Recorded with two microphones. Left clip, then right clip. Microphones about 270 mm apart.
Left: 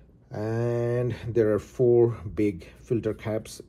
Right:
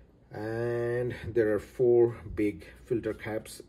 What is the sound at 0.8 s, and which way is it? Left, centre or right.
Speech, centre.